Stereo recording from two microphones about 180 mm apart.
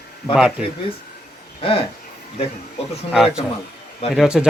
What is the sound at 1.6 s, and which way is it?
Speech, 30° left (ahead or behind).